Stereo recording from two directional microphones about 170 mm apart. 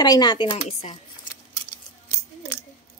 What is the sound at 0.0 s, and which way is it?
Speech, 25° left (ahead or behind).